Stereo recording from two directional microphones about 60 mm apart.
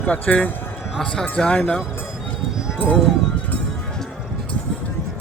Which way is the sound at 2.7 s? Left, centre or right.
Left.